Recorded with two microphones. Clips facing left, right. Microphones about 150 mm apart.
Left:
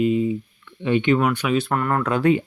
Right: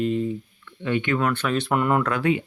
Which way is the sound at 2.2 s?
40° left (ahead or behind).